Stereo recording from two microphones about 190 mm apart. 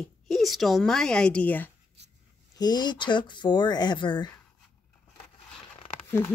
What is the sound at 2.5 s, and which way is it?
Speech, 20° left (ahead or behind).